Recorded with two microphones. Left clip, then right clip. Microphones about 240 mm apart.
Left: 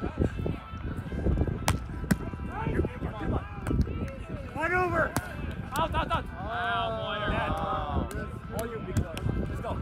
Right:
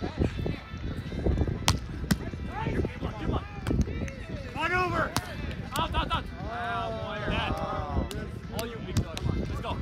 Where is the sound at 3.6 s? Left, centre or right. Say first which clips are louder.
Right 2 dB; centre.